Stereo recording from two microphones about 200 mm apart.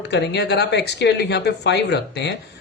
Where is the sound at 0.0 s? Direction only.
60° left (ahead or behind).